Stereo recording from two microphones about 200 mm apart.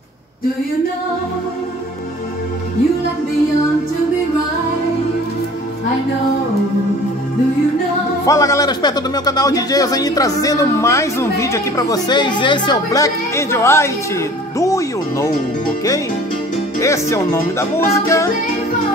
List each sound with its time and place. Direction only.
8.3 s a man's voice: 15° left (ahead or behind)
16.8 s a man's voice: 15° left (ahead or behind)